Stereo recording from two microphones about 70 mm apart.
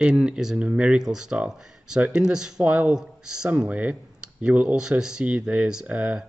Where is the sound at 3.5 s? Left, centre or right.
Right.